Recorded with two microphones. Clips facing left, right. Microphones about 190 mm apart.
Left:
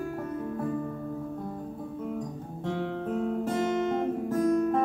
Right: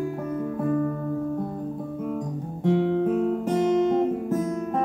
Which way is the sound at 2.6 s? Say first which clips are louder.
Right 10 dB; 15° right (ahead or behind).